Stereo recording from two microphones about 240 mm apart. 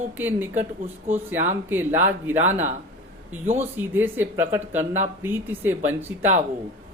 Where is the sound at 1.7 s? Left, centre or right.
Centre.